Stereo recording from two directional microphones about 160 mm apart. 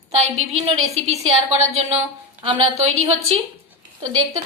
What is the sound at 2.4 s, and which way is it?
A woman's voice, 35° right (ahead or behind).